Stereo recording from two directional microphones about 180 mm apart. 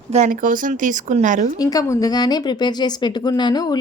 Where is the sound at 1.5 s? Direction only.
20° left (ahead or behind).